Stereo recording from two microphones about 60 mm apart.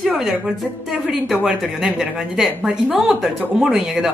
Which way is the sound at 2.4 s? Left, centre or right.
Centre.